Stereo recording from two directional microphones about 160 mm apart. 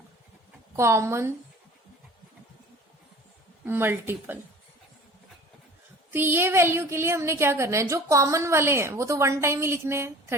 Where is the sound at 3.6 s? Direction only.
15° right (ahead or behind).